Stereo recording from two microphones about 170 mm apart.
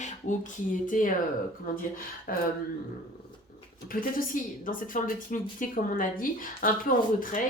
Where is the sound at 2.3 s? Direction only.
60° left (ahead or behind).